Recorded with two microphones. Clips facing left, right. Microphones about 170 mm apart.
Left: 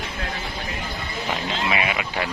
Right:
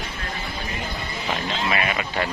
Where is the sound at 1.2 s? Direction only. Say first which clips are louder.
Even; 10° left (ahead or behind).